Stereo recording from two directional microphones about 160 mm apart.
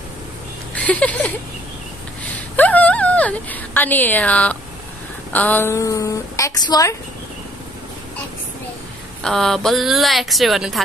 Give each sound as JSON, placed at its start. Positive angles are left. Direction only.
{"t": 0.7, "sound": "a sound", "side_deg": 10}
{"t": 2.3, "sound": "a woman's voice", "side_deg": 10}
{"t": 9.2, "sound": "speech", "side_deg": 5}